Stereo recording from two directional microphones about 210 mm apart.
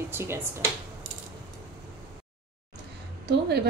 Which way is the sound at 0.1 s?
10° right (ahead or behind).